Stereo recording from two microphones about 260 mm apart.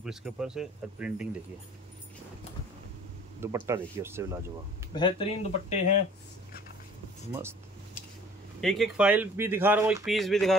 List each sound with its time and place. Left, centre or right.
0.0 s speech: centre
3.3 s speech: centre
4.9 s speech: centre
8.5 s speech: centre